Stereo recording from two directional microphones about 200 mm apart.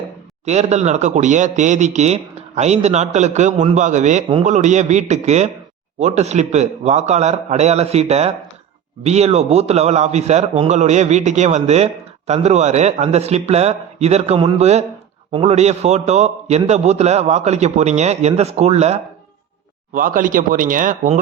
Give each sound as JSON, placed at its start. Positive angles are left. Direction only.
{"t": 0.4, "sound": "a man's voice", "side_deg": -35}
{"t": 20.0, "sound": "speech", "side_deg": -45}